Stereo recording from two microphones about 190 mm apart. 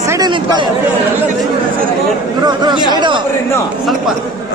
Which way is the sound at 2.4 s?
20° right (ahead or behind).